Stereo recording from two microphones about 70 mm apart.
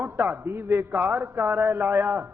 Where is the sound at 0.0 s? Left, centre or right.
Right.